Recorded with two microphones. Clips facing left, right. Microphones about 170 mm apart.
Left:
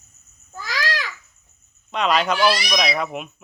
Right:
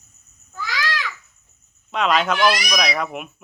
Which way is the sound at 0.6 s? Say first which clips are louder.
Even; 40° left (ahead or behind).